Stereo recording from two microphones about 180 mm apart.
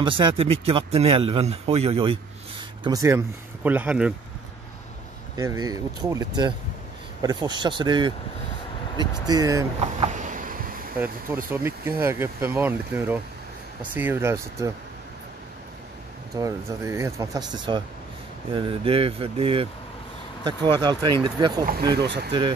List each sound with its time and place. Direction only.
0.0 s speech: 25° right (ahead or behind)
2.8 s speech: 20° right (ahead or behind)
5.4 s speech: 20° right (ahead or behind)
9.2 s speech: 20° right (ahead or behind)
9.8 s a sound: 40° right (ahead or behind)
11.5 s speech: 15° right (ahead or behind)
16.3 s speech: 15° right (ahead or behind)
21.9 s speech: 70° right (ahead or behind)